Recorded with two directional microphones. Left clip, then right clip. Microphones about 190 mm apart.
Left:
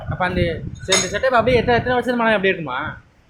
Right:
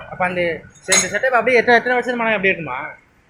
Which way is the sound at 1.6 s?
15° right (ahead or behind).